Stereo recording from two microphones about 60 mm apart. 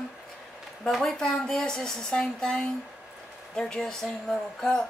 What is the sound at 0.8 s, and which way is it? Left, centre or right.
A woman's voice, centre.